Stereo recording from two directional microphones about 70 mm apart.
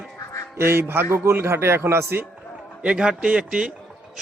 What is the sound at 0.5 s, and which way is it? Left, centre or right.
Speech, right.